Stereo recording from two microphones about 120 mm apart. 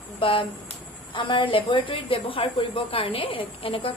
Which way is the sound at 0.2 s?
50° left (ahead or behind).